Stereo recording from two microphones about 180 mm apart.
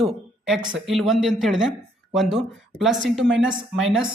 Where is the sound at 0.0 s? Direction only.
Centre (ahead or behind).